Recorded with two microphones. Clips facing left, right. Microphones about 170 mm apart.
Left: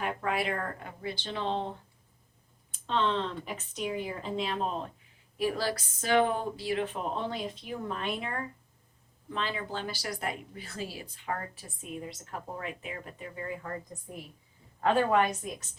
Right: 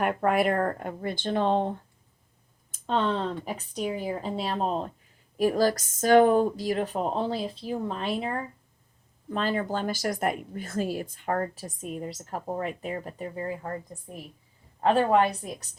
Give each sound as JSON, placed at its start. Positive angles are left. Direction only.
{"t": 0.0, "sound": "speech", "side_deg": -50}
{"t": 2.7, "sound": "speech", "side_deg": -45}
{"t": 9.3, "sound": "speech", "side_deg": -45}
{"t": 14.8, "sound": "speech", "side_deg": -30}